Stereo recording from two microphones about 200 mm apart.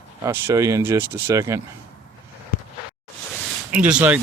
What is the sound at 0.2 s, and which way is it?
Speech, 15° right (ahead or behind).